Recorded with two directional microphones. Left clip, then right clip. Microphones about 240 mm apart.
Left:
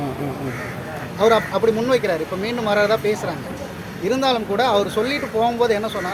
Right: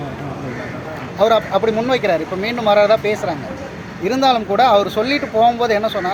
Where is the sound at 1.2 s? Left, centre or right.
Centre.